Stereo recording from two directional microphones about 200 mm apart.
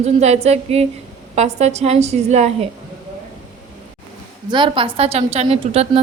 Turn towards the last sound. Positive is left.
turn(degrees=-30)  # may be behind; listen again after turning